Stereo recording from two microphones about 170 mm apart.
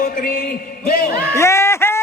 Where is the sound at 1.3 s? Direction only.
15° left (ahead or behind).